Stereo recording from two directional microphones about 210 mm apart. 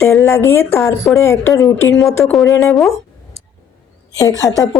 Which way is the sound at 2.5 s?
15° left (ahead or behind).